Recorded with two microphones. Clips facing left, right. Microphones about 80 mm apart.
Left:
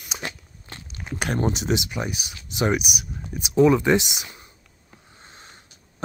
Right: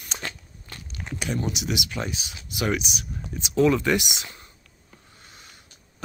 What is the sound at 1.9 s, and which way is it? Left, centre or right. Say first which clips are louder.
Speech: left 2 dB; centre.